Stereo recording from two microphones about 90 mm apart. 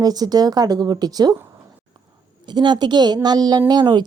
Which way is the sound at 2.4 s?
55° right (ahead or behind).